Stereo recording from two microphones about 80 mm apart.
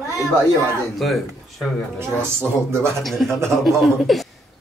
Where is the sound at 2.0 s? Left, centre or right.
Right.